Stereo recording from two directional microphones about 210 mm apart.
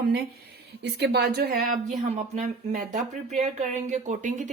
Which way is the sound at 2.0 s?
35° right (ahead or behind).